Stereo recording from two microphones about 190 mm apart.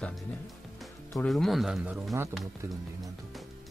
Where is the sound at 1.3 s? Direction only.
Centre (ahead or behind).